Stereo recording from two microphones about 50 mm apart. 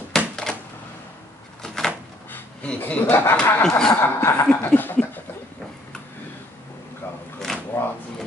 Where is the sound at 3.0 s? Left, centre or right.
Left.